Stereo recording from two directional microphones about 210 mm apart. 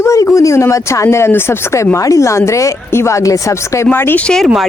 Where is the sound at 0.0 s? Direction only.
15° left (ahead or behind).